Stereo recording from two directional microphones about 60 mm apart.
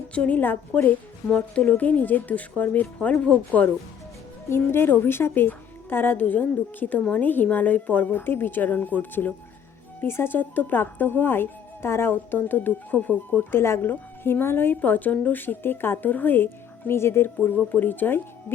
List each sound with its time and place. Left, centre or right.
0.1 s speech: left
4.4 s a woman's voice: left
13.5 s a woman's voice: left
17.4 s a woman's voice: left